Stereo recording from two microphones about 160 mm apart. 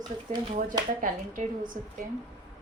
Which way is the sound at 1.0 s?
55° right (ahead or behind).